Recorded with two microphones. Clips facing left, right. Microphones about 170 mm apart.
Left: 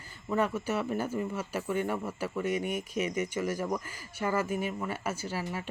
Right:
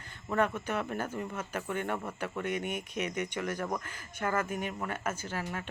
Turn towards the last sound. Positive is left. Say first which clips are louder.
# left 2 dB
turn(degrees=10)  # may be behind; listen again after turning